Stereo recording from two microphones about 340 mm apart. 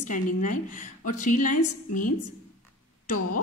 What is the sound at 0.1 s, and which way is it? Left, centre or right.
A woman's voice, left.